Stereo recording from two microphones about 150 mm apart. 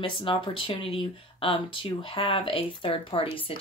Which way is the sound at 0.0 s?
35° left (ahead or behind).